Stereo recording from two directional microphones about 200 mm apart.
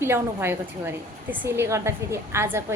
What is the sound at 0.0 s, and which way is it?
A woman's voice, 10° right (ahead or behind).